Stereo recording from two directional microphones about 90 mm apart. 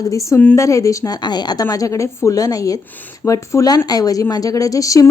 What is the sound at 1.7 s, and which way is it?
A woman's voice, 35° left (ahead or behind).